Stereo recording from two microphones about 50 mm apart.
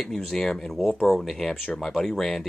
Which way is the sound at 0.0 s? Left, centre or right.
Centre.